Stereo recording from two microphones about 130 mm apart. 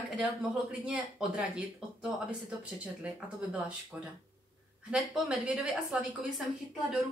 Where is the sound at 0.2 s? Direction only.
10° right (ahead or behind).